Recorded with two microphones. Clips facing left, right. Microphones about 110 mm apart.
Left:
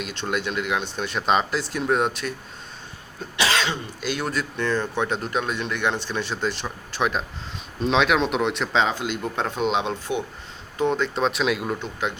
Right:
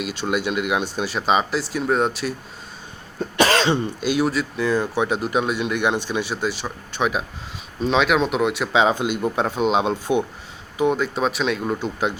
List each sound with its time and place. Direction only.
0.0 s speech: 10° right (ahead or behind)
3.3 s cough: 45° right (ahead or behind)
4.0 s speech: 10° right (ahead or behind)
9.8 s speech: 15° right (ahead or behind)